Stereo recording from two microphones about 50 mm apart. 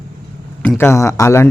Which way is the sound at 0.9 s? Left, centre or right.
Left.